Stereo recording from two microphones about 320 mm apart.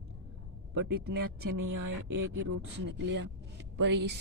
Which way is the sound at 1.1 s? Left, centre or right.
Right.